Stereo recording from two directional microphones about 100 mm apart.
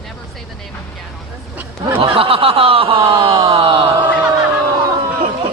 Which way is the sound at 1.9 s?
65° right (ahead or behind).